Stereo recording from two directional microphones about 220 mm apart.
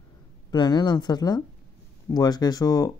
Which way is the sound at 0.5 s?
20° left (ahead or behind).